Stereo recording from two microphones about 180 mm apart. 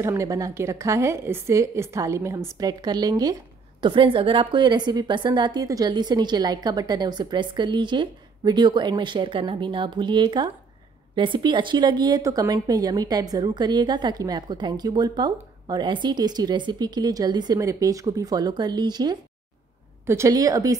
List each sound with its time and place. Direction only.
0.0 s a woman's voice: 15° right (ahead or behind)